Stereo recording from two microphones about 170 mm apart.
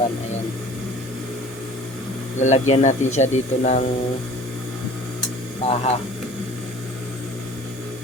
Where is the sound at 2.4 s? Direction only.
40° left (ahead or behind).